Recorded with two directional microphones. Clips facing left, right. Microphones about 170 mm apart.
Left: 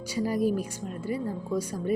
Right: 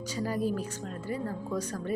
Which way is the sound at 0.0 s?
10° left (ahead or behind).